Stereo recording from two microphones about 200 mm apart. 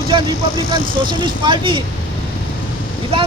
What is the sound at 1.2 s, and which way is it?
Speech, 25° right (ahead or behind).